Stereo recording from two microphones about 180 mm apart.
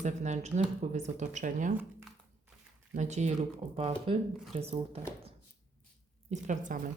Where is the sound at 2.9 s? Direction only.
40° right (ahead or behind).